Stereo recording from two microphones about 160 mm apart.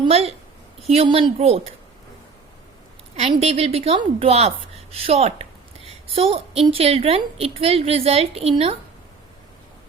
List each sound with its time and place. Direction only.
0.0 s a woman's voice: 40° right (ahead or behind)
3.2 s a woman's voice: 40° right (ahead or behind)